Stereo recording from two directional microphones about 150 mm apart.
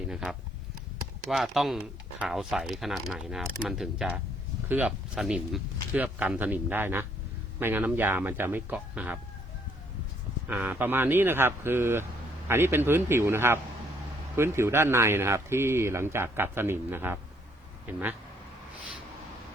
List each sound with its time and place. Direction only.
0.1 s speech: 5° right (ahead or behind)
10.5 s speech: 10° right (ahead or behind)